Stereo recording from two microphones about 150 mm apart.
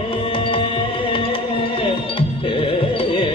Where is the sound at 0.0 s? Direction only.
35° left (ahead or behind).